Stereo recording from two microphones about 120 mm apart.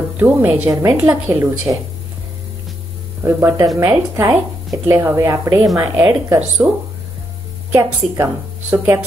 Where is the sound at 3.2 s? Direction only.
20° right (ahead or behind).